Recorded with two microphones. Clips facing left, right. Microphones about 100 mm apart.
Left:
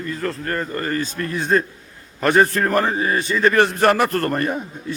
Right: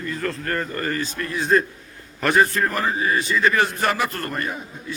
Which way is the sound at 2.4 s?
45° left (ahead or behind).